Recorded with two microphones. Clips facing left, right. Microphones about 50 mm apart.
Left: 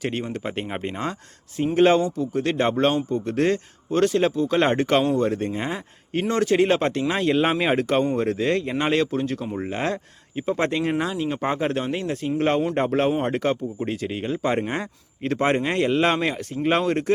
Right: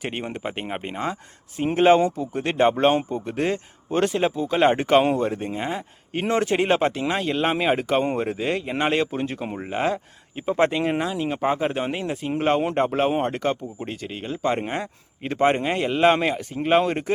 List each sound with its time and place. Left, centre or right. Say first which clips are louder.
0.0 s speech: left 2 dB; centre
2.0 s speech: right 2 dB; right
2.3 s speech: right 2 dB; centre
6.2 s a man's voice: left 1 dB; right
6.7 s speech: even; centre
9.6 s speech: right 3 dB; centre